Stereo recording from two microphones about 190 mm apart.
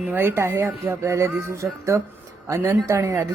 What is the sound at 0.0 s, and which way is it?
Speech, 10° right (ahead or behind).